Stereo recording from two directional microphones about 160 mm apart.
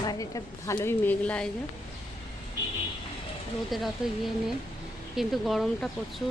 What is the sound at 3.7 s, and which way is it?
Speech, centre (ahead or behind).